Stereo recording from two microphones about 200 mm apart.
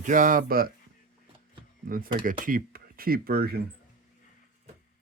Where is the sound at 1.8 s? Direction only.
45° right (ahead or behind).